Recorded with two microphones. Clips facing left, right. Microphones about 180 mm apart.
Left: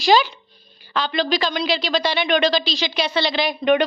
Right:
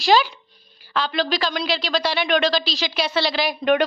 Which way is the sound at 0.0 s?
Centre (ahead or behind).